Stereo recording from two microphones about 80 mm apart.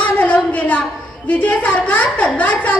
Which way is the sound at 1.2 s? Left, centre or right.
Centre.